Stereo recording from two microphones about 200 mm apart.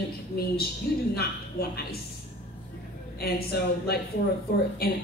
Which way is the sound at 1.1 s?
50° left (ahead or behind).